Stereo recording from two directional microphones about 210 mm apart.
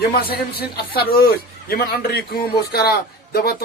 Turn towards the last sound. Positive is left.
turn(degrees=50)  # may be behind; listen again after turning